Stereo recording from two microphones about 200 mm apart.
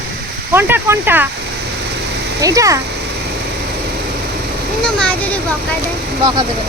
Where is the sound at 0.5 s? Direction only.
10° right (ahead or behind).